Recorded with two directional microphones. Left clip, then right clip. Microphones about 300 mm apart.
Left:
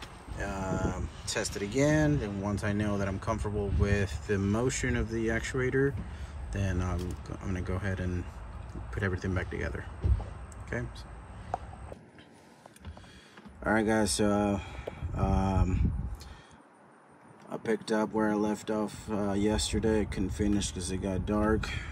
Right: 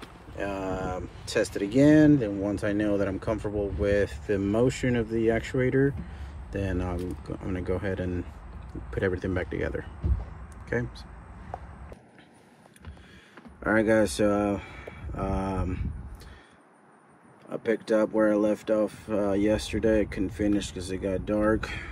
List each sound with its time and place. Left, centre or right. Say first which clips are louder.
0.4 s speech: right 3 dB; centre
13.7 s speech: right 5 dB; centre
17.5 s speech: right 5 dB; centre